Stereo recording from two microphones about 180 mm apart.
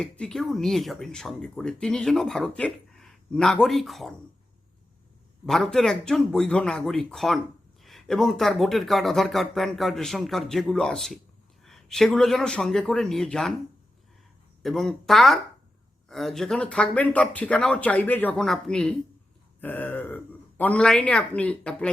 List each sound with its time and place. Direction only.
0.0 s speech: 5° left (ahead or behind)
5.5 s speech: centre (ahead or behind)
14.6 s a man's voice: centre (ahead or behind)